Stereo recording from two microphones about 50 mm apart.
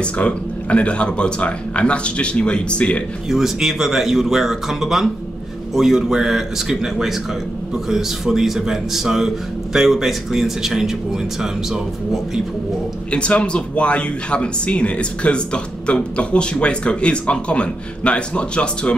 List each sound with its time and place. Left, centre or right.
0.0 s speech: left
3.3 s speech: centre
13.1 s speech: left